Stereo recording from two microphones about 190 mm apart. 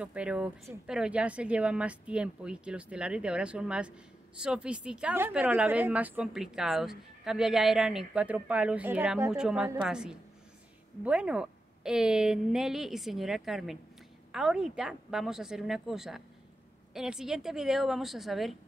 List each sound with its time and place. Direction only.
0.0 s a woman's voice: 5° right (ahead or behind)